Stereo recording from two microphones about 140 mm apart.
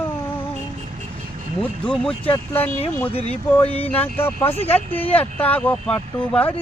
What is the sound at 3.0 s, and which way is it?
Speech, 45° left (ahead or behind).